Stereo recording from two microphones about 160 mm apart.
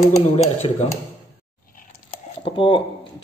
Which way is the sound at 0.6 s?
35° left (ahead or behind).